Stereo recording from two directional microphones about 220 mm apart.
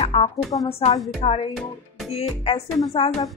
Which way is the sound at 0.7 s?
25° left (ahead or behind).